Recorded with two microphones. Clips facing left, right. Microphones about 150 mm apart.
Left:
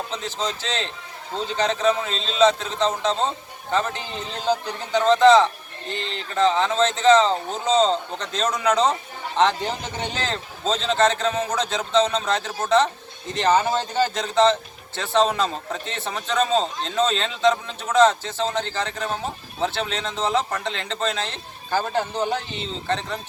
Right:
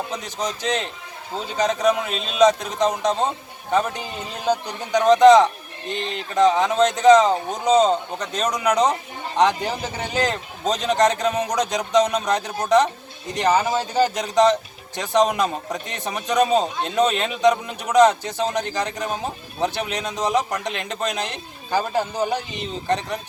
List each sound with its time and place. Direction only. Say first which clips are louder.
0.1 s speech: even; 15° right (ahead or behind)